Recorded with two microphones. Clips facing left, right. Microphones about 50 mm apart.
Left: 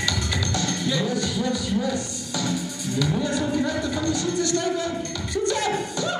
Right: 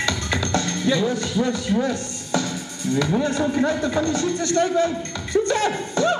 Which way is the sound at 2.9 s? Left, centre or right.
Right.